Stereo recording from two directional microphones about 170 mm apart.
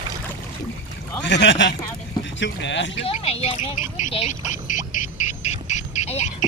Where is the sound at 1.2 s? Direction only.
90° left.